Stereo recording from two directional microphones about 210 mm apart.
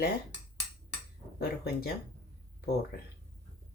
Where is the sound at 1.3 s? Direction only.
45° left (ahead or behind).